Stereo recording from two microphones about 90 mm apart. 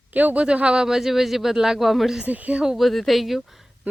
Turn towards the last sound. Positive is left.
turn(degrees=-20)  # may be behind; listen again after turning